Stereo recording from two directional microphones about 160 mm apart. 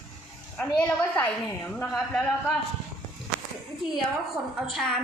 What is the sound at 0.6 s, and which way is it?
A woman's voice, 10° left (ahead or behind).